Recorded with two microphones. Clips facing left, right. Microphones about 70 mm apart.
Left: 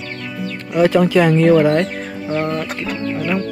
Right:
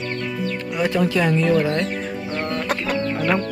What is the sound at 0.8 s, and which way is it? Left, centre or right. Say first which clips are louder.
Speech: left 7 dB; left.